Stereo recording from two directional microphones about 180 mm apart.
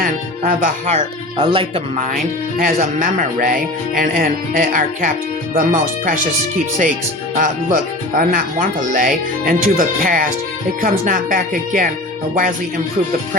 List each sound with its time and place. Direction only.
0.0 s speech: 50° right (ahead or behind); by 1.8 s 30° right (ahead or behind)
2.6 s speech: 50° right (ahead or behind)
7.3 s speech: 50° right (ahead or behind)